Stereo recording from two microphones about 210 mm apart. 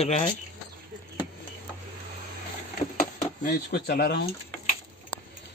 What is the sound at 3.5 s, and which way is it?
Speech, 50° left (ahead or behind).